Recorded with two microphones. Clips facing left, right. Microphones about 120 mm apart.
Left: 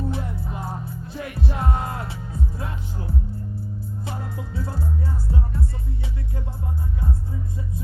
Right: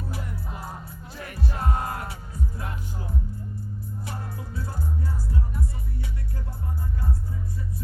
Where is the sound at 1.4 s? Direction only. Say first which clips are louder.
Left 2 dB; 25° left (ahead or behind).